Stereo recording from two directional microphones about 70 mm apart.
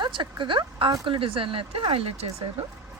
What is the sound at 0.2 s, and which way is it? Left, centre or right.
Speech, right.